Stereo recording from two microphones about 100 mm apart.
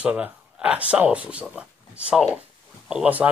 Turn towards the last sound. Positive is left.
turn(degrees=-15)  # may be behind; listen again after turning